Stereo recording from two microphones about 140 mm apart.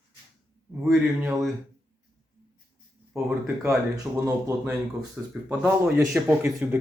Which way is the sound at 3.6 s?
20° right (ahead or behind).